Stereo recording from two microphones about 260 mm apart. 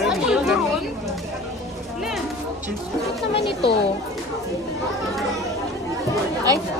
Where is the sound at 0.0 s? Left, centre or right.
Centre.